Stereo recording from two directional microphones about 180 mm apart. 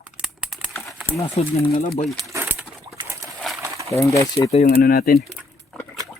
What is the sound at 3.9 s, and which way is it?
Speech, 15° left (ahead or behind).